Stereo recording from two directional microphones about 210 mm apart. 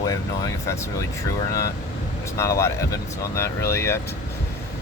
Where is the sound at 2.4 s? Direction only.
15° left (ahead or behind).